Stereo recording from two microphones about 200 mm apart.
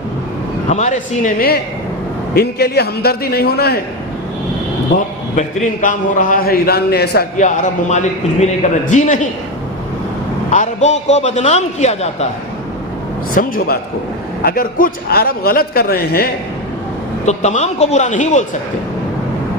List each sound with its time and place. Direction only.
0.7 s a man's voice: 35° left (ahead or behind); by 3.8 s 50° left (ahead or behind)
4.9 s a man's voice: 45° left (ahead or behind)
7.3 s a man's voice: 40° left (ahead or behind)
10.5 s a man's voice: 35° left (ahead or behind)
13.3 s a man's voice: 45° left (ahead or behind)
17.2 s a man's voice: 35° left (ahead or behind)